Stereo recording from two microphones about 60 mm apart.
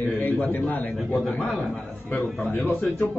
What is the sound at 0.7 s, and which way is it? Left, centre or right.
A man's voice, left.